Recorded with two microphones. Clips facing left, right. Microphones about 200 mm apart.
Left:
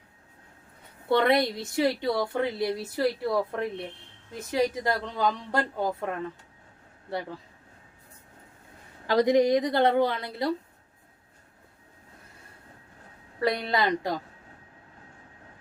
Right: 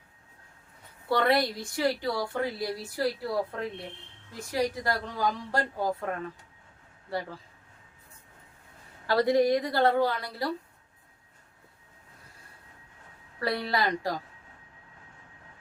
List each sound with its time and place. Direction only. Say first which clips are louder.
1.0 s a woman's voice: left 3 dB; 20° left (ahead or behind)
4.4 s a woman's voice: left 3 dB; 20° left (ahead or behind)
9.0 s a woman's voice: left 2 dB; 20° left (ahead or behind)
13.4 s a woman's voice: left 3 dB; 20° left (ahead or behind)